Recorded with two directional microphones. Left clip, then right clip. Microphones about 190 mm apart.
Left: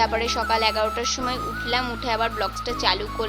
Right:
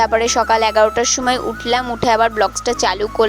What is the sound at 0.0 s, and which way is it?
Speech, 45° right (ahead or behind).